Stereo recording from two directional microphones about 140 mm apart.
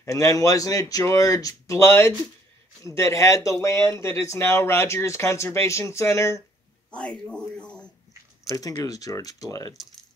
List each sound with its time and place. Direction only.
0.0 s speech: 25° left (ahead or behind)
6.9 s speech: 5° left (ahead or behind)
8.5 s speech: 25° left (ahead or behind)